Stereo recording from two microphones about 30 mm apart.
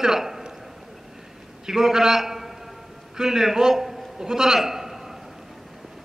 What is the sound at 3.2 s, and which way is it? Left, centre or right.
Speech, centre.